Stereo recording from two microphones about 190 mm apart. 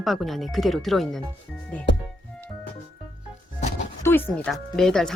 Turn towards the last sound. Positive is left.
turn(degrees=0)  # may be behind; listen again after turning